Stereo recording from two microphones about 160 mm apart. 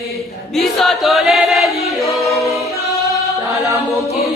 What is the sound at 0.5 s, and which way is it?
Chant, centre (ahead or behind).